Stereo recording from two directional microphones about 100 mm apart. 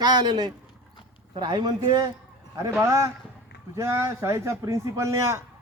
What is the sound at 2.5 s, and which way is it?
A man's voice, 30° right (ahead or behind).